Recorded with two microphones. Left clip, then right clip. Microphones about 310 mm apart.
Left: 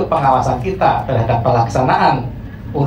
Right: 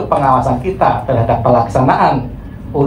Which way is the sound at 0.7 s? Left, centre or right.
Centre.